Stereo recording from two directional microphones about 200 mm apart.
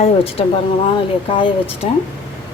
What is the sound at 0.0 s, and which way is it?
Speech, 30° left (ahead or behind).